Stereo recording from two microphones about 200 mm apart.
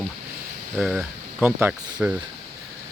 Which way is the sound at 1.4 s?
10° right (ahead or behind).